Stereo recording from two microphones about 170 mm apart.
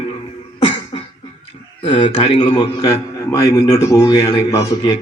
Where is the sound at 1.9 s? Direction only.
25° left (ahead or behind).